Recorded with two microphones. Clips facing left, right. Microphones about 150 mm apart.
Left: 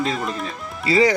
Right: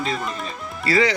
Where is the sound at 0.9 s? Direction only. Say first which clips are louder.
Left 2 dB; 20° left (ahead or behind).